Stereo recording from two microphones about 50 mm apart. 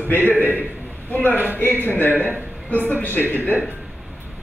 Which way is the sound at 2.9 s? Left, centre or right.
Left.